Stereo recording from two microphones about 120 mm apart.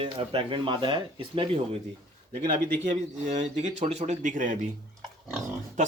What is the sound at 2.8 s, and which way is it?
Speech, 75° right (ahead or behind).